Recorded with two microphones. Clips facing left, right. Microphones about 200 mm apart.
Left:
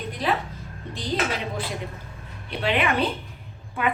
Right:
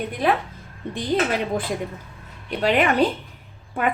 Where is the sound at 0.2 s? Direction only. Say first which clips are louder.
Right 4 dB; 55° right (ahead or behind).